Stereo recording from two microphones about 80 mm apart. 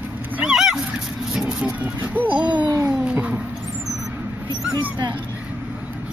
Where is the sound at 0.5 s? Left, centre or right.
Centre.